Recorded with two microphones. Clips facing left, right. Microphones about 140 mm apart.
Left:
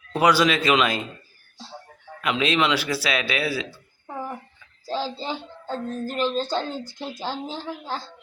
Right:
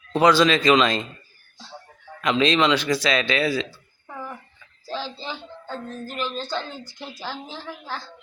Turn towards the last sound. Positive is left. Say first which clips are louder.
# left 3 dB
turn(degrees=30)  # may be behind; listen again after turning